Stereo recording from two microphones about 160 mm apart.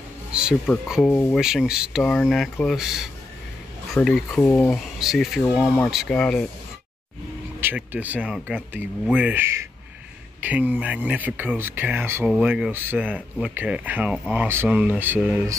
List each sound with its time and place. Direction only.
0.3 s a sound: 5° right (ahead or behind)
1.0 s speech: 10° left (ahead or behind)
1.4 s speech: 5° right (ahead or behind)
4.4 s speech: 15° left (ahead or behind)
4.9 s speech: centre (ahead or behind)
7.6 s speech: 10° right (ahead or behind)